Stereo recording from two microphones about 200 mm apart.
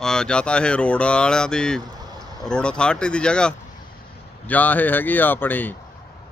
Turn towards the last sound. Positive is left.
turn(degrees=10)  # may be behind; listen again after turning